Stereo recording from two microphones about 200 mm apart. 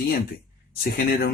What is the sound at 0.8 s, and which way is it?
Speech, 45° left (ahead or behind).